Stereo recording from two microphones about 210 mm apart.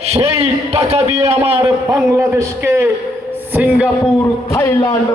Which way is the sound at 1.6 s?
15° right (ahead or behind).